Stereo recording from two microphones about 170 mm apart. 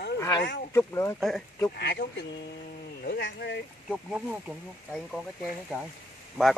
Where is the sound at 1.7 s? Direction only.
70° left (ahead or behind).